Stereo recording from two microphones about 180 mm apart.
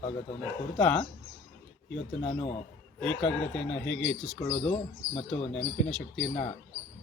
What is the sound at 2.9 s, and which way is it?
Speech, 5° left (ahead or behind).